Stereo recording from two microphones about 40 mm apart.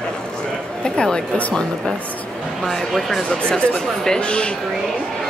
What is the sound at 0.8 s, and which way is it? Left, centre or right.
Speech, left.